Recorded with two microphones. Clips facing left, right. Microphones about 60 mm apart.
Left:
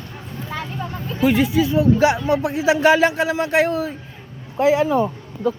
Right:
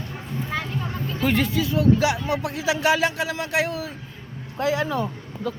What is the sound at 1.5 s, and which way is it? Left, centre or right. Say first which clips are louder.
Speech: left 4 dB; left.